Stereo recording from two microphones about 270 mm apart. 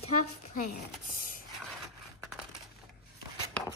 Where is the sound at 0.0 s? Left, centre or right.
Left.